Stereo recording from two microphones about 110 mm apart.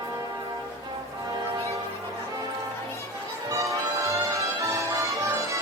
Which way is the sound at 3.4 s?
30° right (ahead or behind).